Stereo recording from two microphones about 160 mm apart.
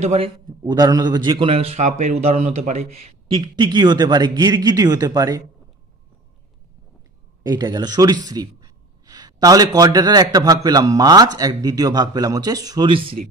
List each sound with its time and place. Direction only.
0.0 s a man's voice: 45° right (ahead or behind)
0.5 s a man's voice: 25° right (ahead or behind)
7.4 s speech: 25° right (ahead or behind)